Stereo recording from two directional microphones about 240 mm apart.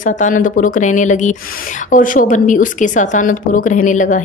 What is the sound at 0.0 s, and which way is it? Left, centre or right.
A woman's voice, left.